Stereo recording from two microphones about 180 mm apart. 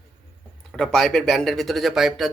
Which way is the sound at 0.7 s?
5° left (ahead or behind).